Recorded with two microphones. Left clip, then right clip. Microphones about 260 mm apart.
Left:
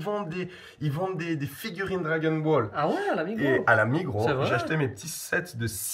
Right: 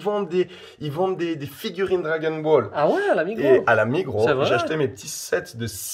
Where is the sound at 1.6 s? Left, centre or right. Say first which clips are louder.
Right 7 dB; right.